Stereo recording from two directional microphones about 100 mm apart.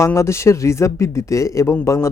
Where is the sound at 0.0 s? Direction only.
30° left (ahead or behind).